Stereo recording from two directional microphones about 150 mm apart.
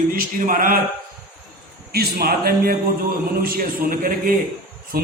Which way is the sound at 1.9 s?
90° right.